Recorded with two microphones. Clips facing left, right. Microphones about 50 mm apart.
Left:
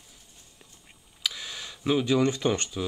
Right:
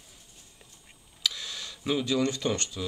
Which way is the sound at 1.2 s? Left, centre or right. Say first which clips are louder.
Even; centre.